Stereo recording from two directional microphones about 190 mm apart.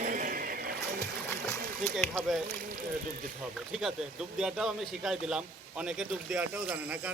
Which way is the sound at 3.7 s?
Centre (ahead or behind).